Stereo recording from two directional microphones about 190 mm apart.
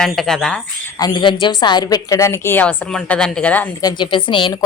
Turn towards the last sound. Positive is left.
turn(degrees=25)  # may be behind; listen again after turning